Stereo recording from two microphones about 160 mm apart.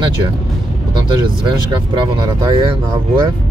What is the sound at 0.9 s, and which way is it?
Speech, 30° right (ahead or behind).